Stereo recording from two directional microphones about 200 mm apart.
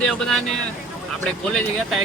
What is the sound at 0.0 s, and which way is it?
Speech, 5° left (ahead or behind).